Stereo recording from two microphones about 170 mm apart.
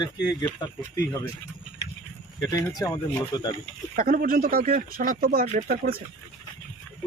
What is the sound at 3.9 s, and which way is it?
Speech, 55° right (ahead or behind).